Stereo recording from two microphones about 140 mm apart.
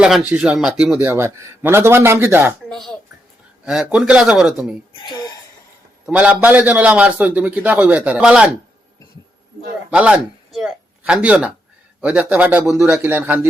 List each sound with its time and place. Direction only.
0.0 s a man's voice: 5° right (ahead or behind)
2.6 s a man's voice: centre (ahead or behind)
5.0 s speech: 30° left (ahead or behind)
6.1 s a man's voice: 10° right (ahead or behind)
9.9 s a man's voice: 5° right (ahead or behind)